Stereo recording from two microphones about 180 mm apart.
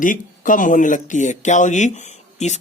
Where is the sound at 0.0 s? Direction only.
50° left (ahead or behind).